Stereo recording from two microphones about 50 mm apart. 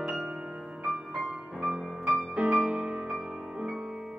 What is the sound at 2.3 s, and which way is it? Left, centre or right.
Music, right.